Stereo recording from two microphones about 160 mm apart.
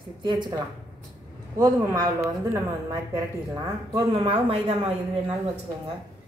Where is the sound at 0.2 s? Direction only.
25° right (ahead or behind).